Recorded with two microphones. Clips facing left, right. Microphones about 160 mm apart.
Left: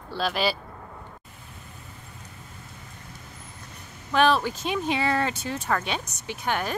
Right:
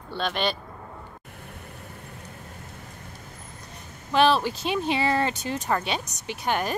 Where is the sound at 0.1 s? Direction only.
5° left (ahead or behind).